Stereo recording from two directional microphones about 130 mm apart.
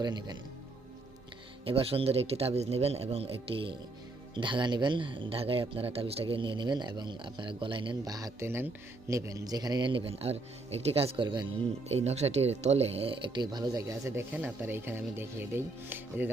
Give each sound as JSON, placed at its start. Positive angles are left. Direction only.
{"t": 0.0, "sound": "a man's voice", "side_deg": -35}
{"t": 1.6, "sound": "a man's voice", "side_deg": -45}
{"t": 11.9, "sound": "speech", "side_deg": -55}